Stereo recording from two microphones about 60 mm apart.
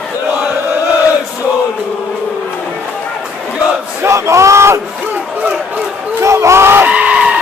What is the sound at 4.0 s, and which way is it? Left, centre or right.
Battle cry, right.